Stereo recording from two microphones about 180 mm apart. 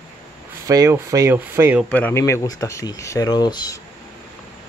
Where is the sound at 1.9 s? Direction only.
10° left (ahead or behind).